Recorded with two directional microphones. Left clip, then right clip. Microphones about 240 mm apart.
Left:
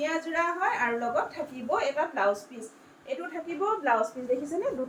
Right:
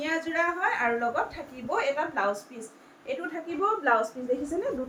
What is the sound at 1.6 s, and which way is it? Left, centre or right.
Speech, centre.